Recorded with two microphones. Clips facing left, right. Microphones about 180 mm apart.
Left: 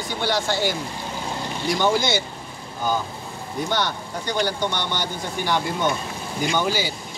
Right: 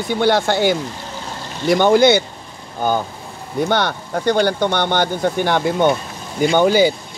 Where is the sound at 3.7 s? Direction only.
55° right (ahead or behind).